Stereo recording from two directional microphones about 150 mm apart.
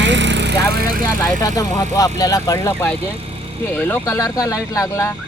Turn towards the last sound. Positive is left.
turn(degrees=20)  # may be behind; listen again after turning